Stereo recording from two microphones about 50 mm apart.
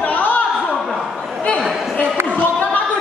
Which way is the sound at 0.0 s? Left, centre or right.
Left.